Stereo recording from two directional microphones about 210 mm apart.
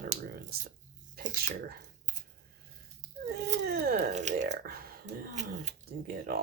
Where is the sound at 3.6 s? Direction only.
50° right (ahead or behind).